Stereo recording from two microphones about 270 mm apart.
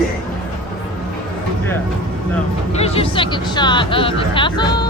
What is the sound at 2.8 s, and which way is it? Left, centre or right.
Speech, left.